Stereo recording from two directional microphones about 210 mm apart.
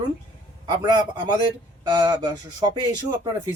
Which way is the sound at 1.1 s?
20° right (ahead or behind).